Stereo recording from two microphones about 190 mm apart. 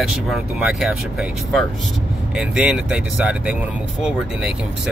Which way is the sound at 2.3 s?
5° right (ahead or behind).